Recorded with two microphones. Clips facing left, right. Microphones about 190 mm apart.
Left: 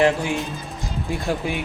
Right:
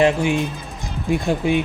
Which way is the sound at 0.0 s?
20° right (ahead or behind).